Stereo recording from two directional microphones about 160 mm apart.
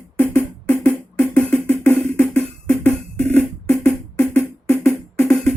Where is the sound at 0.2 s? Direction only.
10° left (ahead or behind).